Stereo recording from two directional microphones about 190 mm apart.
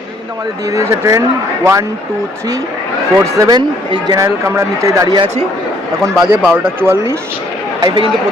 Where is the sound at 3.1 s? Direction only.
15° right (ahead or behind).